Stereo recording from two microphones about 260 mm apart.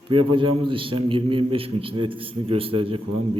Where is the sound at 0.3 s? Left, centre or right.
Centre.